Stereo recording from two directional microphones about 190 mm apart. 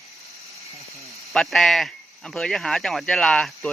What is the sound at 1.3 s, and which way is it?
Speech, centre (ahead or behind).